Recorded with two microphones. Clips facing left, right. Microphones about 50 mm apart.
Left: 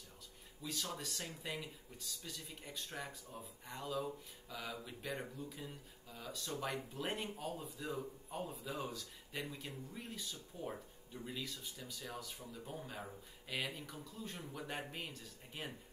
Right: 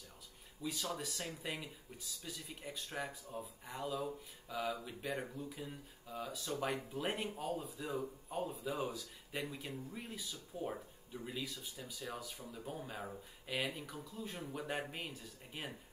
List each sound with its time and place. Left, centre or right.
0.6 s speech: centre
14.4 s speech: centre
14.7 s speech: centre